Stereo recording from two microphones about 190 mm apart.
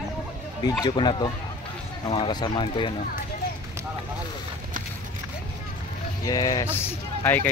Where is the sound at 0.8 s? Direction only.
25° left (ahead or behind).